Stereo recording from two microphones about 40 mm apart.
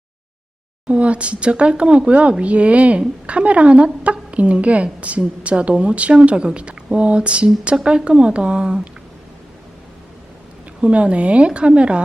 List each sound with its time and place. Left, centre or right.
0.9 s a woman's voice: right
10.8 s speech: right